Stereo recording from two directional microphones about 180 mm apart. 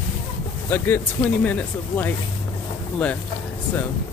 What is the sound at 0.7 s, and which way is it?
Speech, 10° left (ahead or behind).